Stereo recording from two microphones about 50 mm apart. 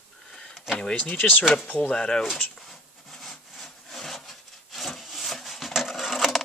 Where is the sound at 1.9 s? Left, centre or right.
Centre.